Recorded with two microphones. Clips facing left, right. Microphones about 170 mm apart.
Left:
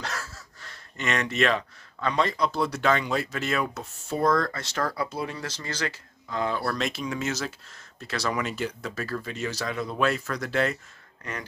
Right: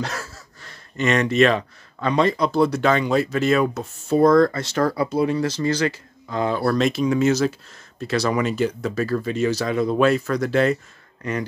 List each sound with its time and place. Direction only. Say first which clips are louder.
0.0 s a sound: right 6 dB; 20° right (ahead or behind)
0.9 s speech: right 9 dB; 30° right (ahead or behind)
4.6 s speech: right 8 dB; 20° right (ahead or behind)
6.2 s speech: right 6 dB; 25° right (ahead or behind)